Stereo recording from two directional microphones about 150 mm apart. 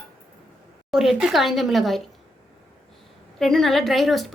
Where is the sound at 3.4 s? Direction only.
Centre (ahead or behind).